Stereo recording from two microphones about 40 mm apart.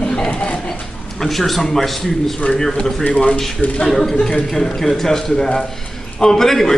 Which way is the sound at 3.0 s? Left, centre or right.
Left.